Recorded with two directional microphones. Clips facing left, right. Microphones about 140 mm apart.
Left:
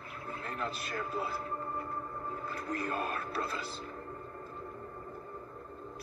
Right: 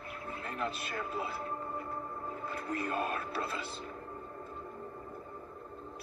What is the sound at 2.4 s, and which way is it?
A man's voice, 40° left (ahead or behind).